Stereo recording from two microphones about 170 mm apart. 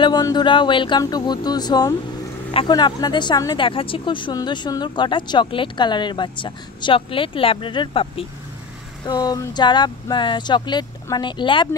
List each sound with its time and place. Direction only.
0.0 s speech: 25° left (ahead or behind)